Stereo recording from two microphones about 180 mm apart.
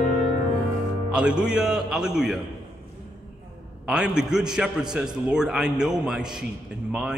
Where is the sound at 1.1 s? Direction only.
5° right (ahead or behind).